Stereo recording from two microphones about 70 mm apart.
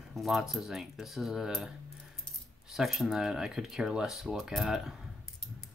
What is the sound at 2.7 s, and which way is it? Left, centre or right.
Speech, centre.